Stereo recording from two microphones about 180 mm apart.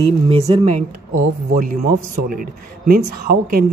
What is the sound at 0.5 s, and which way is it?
Speech, 35° right (ahead or behind).